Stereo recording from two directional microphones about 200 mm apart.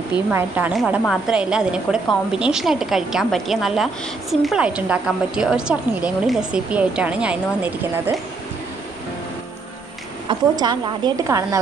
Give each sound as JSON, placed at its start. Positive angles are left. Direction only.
{"t": 0.3, "sound": "a woman's voice", "side_deg": -10}
{"t": 10.2, "sound": "a woman's voice", "side_deg": -20}